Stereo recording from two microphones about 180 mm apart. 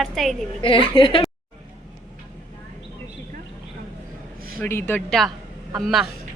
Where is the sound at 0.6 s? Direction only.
30° left (ahead or behind).